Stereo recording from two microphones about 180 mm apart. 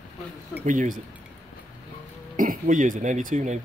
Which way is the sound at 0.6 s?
45° right (ahead or behind).